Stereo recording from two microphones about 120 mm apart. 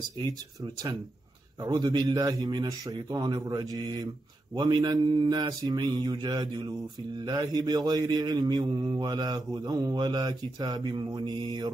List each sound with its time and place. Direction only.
0.2 s a man's voice: 35° right (ahead or behind)